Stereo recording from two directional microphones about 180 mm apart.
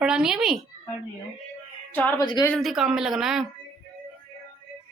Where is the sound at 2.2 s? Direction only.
25° left (ahead or behind).